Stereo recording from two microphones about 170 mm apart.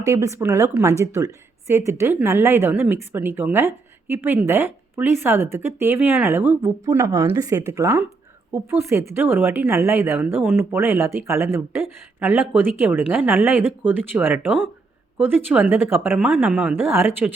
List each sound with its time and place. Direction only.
0.0 s a woman's voice: 15° right (ahead or behind)